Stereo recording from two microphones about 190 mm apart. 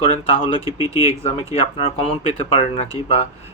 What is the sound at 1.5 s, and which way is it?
Speech, 30° left (ahead or behind).